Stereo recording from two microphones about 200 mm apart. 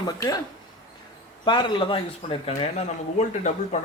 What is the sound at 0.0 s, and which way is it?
Speech, 20° left (ahead or behind).